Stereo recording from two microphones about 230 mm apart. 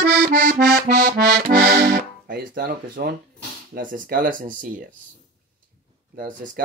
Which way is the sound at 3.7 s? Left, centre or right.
Right.